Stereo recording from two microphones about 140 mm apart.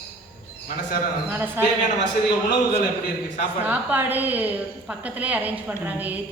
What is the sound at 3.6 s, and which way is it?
A woman's voice, 10° right (ahead or behind).